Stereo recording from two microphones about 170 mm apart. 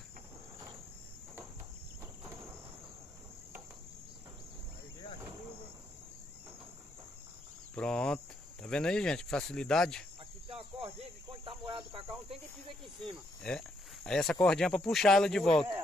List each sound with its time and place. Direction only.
7.7 s cricket: 5° left (ahead or behind)
8.6 s speech: 5° left (ahead or behind)
10.5 s cricket: 35° right (ahead or behind)
13.0 s speech: 5° left (ahead or behind)